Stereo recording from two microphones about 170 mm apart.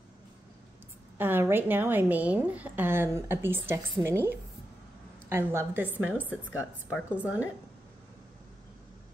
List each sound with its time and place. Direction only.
1.1 s a woman's voice: 10° right (ahead or behind)
6.2 s speech: 15° left (ahead or behind)
7.1 s a woman's voice: 10° right (ahead or behind)